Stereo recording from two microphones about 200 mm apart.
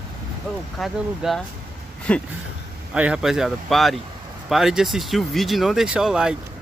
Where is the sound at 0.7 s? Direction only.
Centre (ahead or behind).